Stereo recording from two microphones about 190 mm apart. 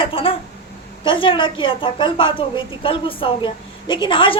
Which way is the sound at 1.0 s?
25° left (ahead or behind).